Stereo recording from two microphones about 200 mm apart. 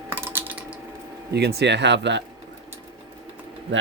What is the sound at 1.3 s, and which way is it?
Speech, 55° right (ahead or behind).